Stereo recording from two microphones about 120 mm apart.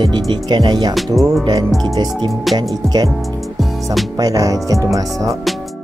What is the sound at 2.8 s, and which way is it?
Speech, 35° right (ahead or behind).